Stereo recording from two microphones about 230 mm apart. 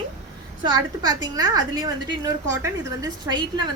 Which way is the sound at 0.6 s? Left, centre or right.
Centre.